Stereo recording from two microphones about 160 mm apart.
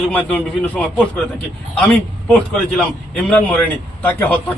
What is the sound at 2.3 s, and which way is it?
A man's voice, 5° left (ahead or behind).